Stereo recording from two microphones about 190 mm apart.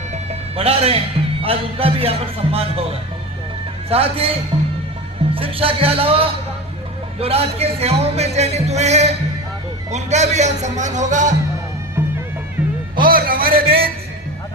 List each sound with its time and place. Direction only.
0.1 s speech: 35° right (ahead or behind)
3.8 s speech: 30° right (ahead or behind)
5.3 s music: 30° right (ahead or behind)
7.2 s speech: 30° right (ahead or behind)
13.1 s speech: 50° right (ahead or behind)